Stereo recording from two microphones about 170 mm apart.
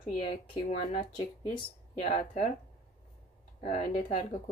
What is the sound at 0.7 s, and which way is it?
Speech, 30° left (ahead or behind).